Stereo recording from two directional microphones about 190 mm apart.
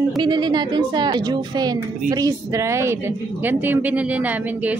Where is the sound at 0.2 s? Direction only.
25° right (ahead or behind).